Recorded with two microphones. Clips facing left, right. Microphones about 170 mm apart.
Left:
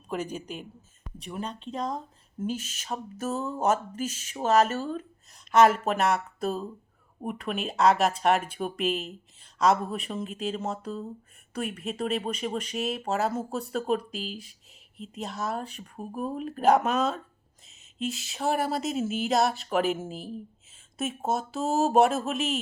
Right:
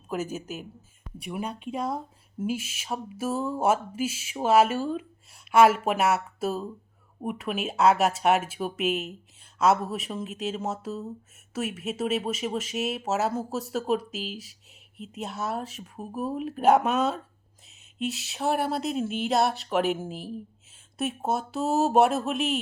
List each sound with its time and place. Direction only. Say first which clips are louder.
0.1 s speech: right 1 dB; 5° right (ahead or behind)